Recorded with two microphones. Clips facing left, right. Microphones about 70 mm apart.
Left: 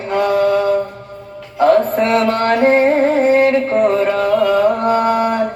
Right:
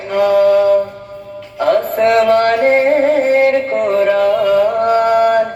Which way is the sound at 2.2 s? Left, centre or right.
Left.